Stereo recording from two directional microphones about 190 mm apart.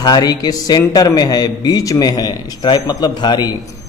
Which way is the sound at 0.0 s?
20° left (ahead or behind).